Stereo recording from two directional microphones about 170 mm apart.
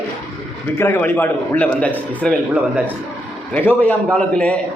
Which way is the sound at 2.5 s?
10° right (ahead or behind).